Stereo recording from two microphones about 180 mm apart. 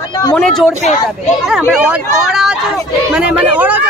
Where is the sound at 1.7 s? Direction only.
5° right (ahead or behind).